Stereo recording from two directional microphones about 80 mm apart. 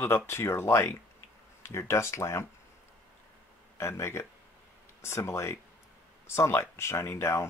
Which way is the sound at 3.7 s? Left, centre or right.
Left.